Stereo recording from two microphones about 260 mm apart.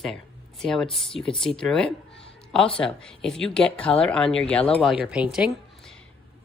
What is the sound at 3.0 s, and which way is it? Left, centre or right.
Speech, centre.